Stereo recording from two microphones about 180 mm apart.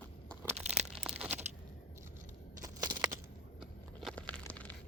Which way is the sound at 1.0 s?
5° right (ahead or behind).